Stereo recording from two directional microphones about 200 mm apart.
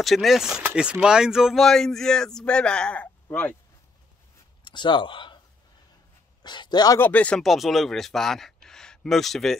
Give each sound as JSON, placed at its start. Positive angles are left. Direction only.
{"t": 0.0, "sound": "speech", "side_deg": 0}
{"t": 4.6, "sound": "speech", "side_deg": 25}
{"t": 6.4, "sound": "speech", "side_deg": 20}
{"t": 8.6, "sound": "a sound", "side_deg": 5}